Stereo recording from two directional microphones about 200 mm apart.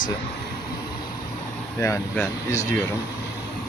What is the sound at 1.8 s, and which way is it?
Speech, 15° left (ahead or behind).